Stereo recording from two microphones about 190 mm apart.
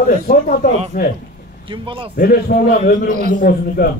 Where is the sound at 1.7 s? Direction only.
25° right (ahead or behind).